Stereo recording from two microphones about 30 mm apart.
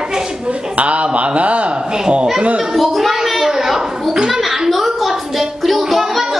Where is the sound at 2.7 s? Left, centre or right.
Centre.